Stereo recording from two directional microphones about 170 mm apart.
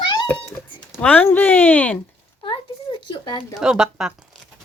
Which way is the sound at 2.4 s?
30° left (ahead or behind).